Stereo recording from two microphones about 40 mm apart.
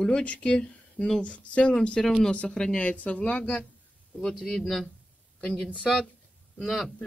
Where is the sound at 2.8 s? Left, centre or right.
Left.